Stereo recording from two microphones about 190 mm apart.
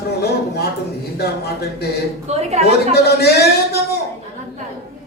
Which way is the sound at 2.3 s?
35° right (ahead or behind).